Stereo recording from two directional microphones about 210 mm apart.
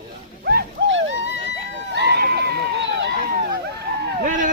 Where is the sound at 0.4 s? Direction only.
55° right (ahead or behind).